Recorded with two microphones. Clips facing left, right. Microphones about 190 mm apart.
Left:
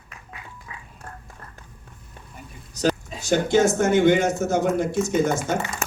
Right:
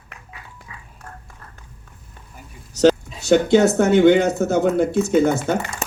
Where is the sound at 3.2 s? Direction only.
65° right (ahead or behind).